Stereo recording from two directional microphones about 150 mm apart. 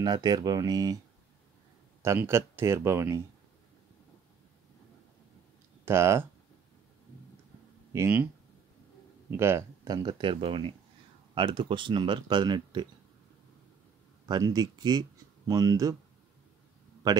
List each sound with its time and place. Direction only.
0.0 s speech: 30° right (ahead or behind)
2.0 s speech: 15° right (ahead or behind)
5.9 s speech: 15° right (ahead or behind)
7.9 s speech: 15° right (ahead or behind)
9.4 s speech: 15° right (ahead or behind)
14.2 s speech: 30° right (ahead or behind)